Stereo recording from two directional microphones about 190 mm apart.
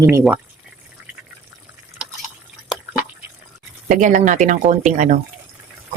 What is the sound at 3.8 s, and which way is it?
Speech, 45° right (ahead or behind).